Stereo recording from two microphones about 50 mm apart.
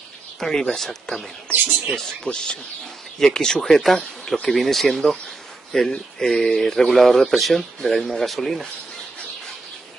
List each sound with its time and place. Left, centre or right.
0.4 s speech: centre
2.2 s speech: centre
3.7 s speech: centre